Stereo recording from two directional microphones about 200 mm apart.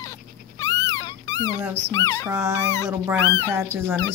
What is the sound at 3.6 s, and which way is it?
Speech, 10° right (ahead or behind).